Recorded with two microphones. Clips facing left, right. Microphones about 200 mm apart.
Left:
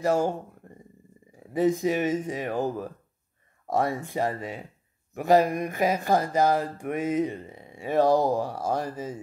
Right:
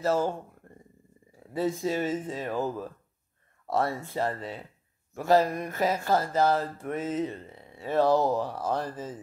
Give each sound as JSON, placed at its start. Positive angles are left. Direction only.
{"t": 0.0, "sound": "speech", "side_deg": 15}